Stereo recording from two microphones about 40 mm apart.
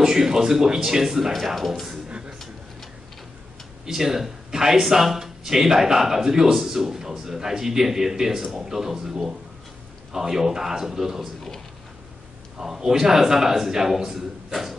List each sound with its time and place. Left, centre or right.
0.0 s speech: centre
2.0 s a sound: right
3.8 s speech: centre
12.5 s speech: centre